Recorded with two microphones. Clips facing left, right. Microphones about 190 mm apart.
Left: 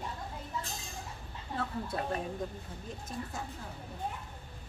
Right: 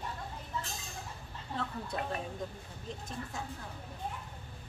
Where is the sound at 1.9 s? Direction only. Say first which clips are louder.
Left 1 dB; 5° left (ahead or behind).